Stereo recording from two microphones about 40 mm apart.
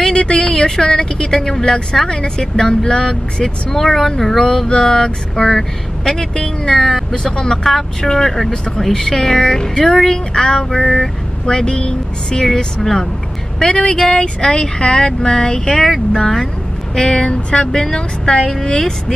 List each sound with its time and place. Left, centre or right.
0.1 s speech: left
6.7 s speech: centre
13.6 s speech: left
16.9 s speech: left